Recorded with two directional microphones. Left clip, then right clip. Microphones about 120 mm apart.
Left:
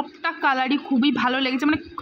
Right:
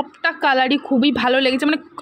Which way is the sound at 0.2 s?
35° right (ahead or behind).